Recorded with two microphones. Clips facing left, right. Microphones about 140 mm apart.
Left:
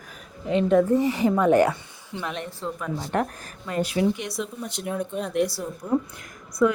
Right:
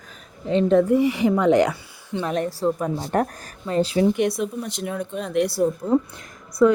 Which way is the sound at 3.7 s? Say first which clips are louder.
Right 5 dB; 30° right (ahead or behind).